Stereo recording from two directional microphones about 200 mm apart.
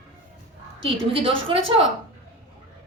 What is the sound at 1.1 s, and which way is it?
Speech, 25° right (ahead or behind).